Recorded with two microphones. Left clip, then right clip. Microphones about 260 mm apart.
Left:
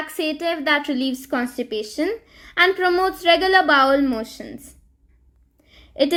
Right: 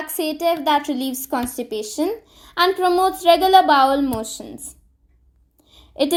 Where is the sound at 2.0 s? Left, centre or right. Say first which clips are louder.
Even; right.